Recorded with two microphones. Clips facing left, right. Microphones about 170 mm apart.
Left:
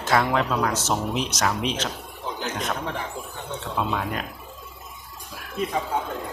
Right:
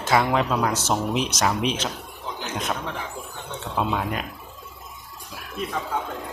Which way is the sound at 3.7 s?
10° right (ahead or behind).